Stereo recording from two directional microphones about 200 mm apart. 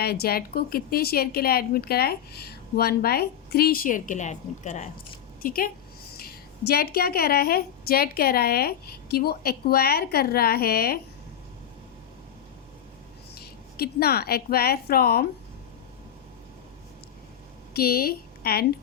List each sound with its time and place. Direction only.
0.0 s a woman's voice: 50° left (ahead or behind)
13.4 s a woman's voice: 50° left (ahead or behind)
17.7 s a woman's voice: 50° left (ahead or behind)